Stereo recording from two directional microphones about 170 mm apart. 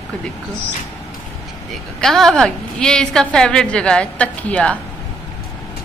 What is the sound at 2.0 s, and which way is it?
A woman's voice, centre (ahead or behind).